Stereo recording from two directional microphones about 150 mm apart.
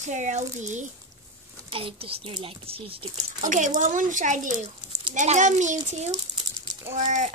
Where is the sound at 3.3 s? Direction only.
60° right (ahead or behind).